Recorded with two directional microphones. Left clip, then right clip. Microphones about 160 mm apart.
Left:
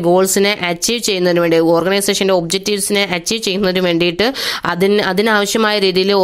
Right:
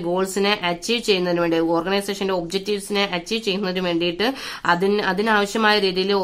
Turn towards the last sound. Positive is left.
turn(degrees=55)  # may be behind; listen again after turning